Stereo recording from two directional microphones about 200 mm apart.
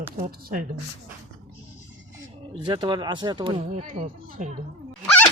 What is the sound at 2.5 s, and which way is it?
Speech, 20° right (ahead or behind).